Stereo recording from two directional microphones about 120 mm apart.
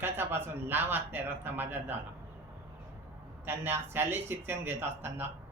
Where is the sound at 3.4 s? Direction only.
20° right (ahead or behind).